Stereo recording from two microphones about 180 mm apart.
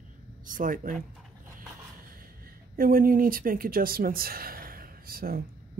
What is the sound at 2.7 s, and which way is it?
Speech, 55° right (ahead or behind).